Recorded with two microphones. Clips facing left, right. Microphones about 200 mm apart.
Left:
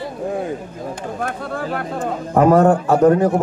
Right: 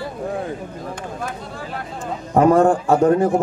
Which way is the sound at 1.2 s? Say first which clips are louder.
Left 5 dB; 55° left (ahead or behind).